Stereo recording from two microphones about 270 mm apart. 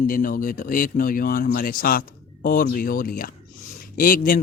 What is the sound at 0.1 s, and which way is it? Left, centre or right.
A man's voice, left.